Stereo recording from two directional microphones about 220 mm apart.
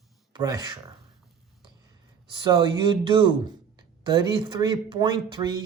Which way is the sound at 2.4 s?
20° right (ahead or behind).